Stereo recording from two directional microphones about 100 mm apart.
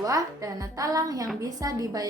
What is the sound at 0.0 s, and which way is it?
A woman's voice, 35° right (ahead or behind).